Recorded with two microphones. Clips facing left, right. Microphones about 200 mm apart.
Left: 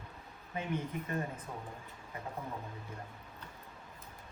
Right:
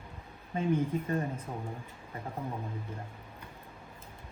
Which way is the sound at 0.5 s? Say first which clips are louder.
Right 8 dB; 30° right (ahead or behind).